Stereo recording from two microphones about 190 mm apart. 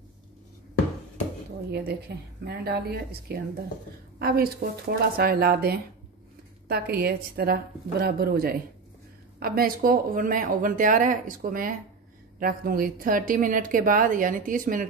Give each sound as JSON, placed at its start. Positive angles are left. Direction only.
{"t": 1.7, "sound": "a woman's voice", "side_deg": -60}